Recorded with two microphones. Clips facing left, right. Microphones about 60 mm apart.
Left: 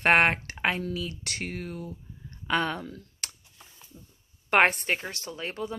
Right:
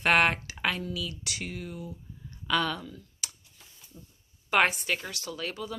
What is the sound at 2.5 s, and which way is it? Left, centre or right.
Speech, left.